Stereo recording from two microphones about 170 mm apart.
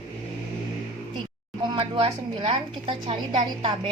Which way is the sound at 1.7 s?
30° right (ahead or behind).